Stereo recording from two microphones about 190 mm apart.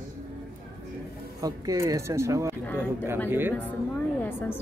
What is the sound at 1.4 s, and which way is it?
Speech, 20° right (ahead or behind).